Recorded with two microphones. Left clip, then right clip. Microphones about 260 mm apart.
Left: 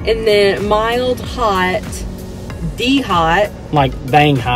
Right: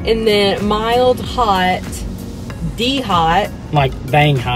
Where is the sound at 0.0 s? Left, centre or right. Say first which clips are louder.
Left 1 dB; centre.